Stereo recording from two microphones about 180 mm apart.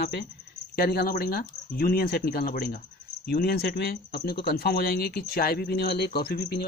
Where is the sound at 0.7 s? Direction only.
55° left (ahead or behind).